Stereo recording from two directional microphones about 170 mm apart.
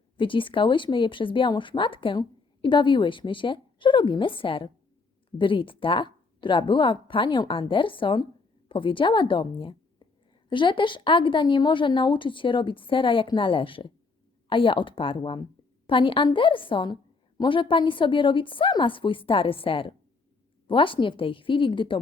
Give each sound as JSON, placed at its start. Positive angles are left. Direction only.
{"t": 0.2, "sound": "a woman's voice", "side_deg": 30}